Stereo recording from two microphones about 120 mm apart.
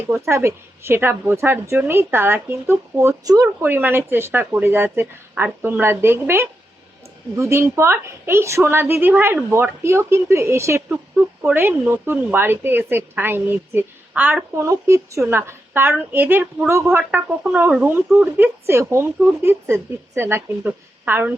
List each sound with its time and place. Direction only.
0.1 s a woman's voice: 20° right (ahead or behind)
3.6 s a woman's voice: 15° right (ahead or behind)
17.0 s speech: 10° right (ahead or behind)